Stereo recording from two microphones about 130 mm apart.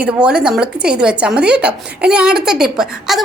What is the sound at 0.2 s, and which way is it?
A woman's voice, 5° right (ahead or behind).